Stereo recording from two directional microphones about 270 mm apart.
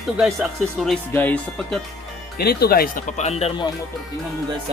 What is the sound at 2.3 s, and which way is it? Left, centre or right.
Speech, left.